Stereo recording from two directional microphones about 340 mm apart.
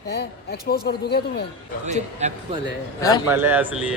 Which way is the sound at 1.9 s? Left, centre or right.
Centre.